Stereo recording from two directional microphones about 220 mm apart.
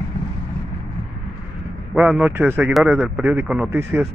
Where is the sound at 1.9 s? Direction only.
5° right (ahead or behind).